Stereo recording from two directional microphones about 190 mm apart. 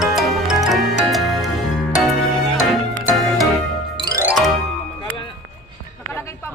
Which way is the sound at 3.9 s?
20° right (ahead or behind).